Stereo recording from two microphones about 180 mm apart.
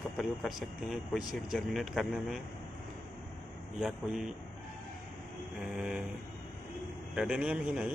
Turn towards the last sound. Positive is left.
turn(degrees=-5)  # may be behind; listen again after turning